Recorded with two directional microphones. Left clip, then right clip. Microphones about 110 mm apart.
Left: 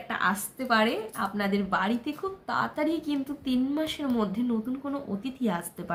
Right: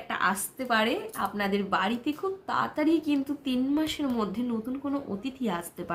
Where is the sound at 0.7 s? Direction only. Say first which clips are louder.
Left 1 dB; centre (ahead or behind).